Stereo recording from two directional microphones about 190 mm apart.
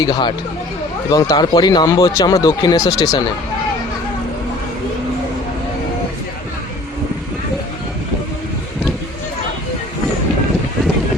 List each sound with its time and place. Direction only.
0.0 s speech: 25° left (ahead or behind)